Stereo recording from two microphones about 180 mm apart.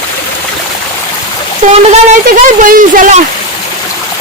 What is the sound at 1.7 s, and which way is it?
Speech, 40° right (ahead or behind).